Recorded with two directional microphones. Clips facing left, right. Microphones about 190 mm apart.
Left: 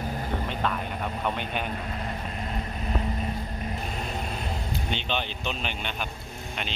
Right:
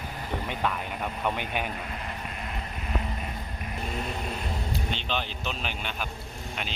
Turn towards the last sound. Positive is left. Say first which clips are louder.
# left 1 dB
turn(degrees=-5)  # may be behind; listen again after turning